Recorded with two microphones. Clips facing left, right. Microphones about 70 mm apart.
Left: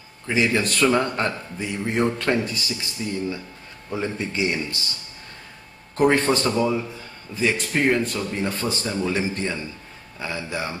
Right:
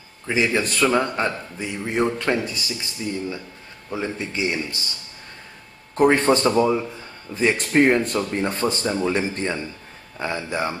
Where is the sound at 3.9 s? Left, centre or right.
Centre.